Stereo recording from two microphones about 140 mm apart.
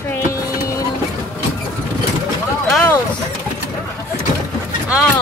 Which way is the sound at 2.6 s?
5° left (ahead or behind).